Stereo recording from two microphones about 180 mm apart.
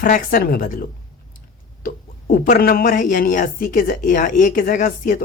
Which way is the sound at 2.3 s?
55° left (ahead or behind).